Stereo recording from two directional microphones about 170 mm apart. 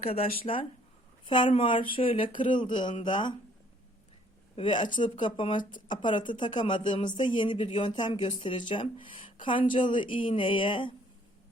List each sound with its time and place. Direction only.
0.0 s speech: 35° left (ahead or behind)
4.5 s speech: 30° left (ahead or behind)